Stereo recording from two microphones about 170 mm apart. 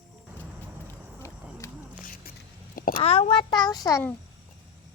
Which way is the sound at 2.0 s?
55° left (ahead or behind).